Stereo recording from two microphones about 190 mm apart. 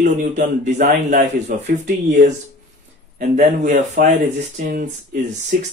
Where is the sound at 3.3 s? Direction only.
45° right (ahead or behind).